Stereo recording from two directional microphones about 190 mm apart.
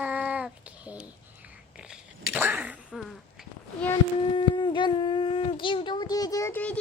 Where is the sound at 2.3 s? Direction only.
10° right (ahead or behind).